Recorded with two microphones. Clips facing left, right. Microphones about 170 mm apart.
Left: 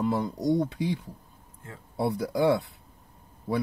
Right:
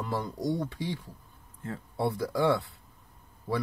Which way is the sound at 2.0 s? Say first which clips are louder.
Left 2 dB; 20° left (ahead or behind).